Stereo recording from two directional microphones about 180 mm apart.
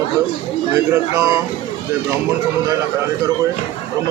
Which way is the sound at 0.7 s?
15° right (ahead or behind).